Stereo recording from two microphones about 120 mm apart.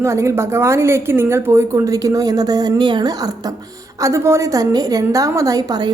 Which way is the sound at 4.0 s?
25° right (ahead or behind).